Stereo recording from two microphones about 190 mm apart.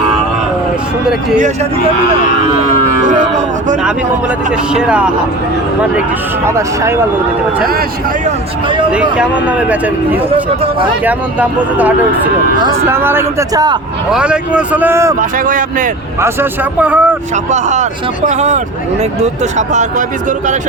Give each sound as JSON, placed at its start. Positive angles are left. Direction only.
{"t": 3.1, "sound": "speech", "side_deg": -40}
{"t": 4.7, "sound": "speech", "side_deg": -5}
{"t": 6.4, "sound": "speech", "side_deg": -15}
{"t": 8.9, "sound": "speech", "side_deg": -5}
{"t": 10.3, "sound": "speech", "side_deg": -25}
{"t": 11.0, "sound": "speech", "side_deg": -10}
{"t": 14.1, "sound": "speech", "side_deg": -5}
{"t": 15.2, "sound": "speech", "side_deg": -45}
{"t": 16.2, "sound": "speech", "side_deg": -10}
{"t": 17.5, "sound": "speech", "side_deg": -40}